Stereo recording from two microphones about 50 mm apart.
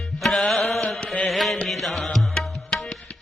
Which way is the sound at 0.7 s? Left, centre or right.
Centre.